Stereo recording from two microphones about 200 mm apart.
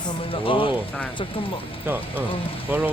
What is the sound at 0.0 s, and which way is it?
Speech, 25° left (ahead or behind).